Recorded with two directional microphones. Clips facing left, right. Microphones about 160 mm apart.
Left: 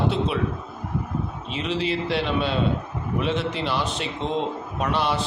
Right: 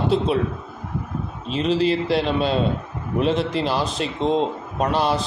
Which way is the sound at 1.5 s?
40° right (ahead or behind).